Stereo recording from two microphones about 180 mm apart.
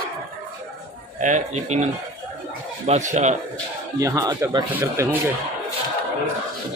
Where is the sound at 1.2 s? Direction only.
40° right (ahead or behind).